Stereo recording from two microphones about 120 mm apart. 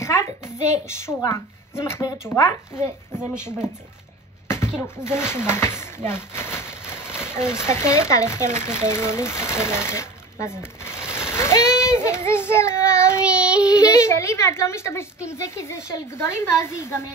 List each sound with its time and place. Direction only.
0.0 s a sound: 25° left (ahead or behind)
0.8 s speech: 25° left (ahead or behind)
4.5 s speech: 20° left (ahead or behind)
11.1 s child singing: 20° left (ahead or behind)
13.2 s child singing: 10° right (ahead or behind)
13.7 s a woman's voice: 30° left (ahead or behind)